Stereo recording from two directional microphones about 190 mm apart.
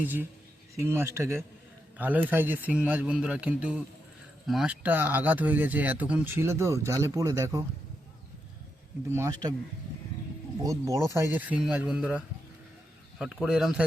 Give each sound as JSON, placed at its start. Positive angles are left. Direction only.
{"t": 0.0, "sound": "speech", "side_deg": -10}
{"t": 9.1, "sound": "speech", "side_deg": -15}
{"t": 10.6, "sound": "speech", "side_deg": -15}